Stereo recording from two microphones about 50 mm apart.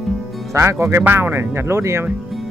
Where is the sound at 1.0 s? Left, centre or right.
Right.